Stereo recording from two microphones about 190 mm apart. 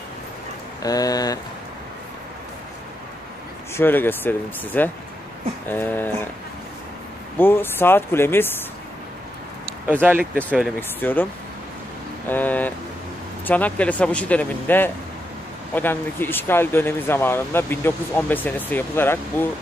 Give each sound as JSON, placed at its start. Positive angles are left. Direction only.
{"t": 0.8, "sound": "speech", "side_deg": 20}
{"t": 3.7, "sound": "speech", "side_deg": 10}
{"t": 7.3, "sound": "speech", "side_deg": 10}
{"t": 9.8, "sound": "speech", "side_deg": -10}
{"t": 10.5, "sound": "speech", "side_deg": 10}
{"t": 12.3, "sound": "speech", "side_deg": 10}